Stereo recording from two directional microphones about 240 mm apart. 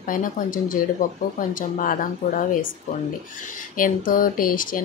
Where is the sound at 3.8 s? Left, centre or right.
Left.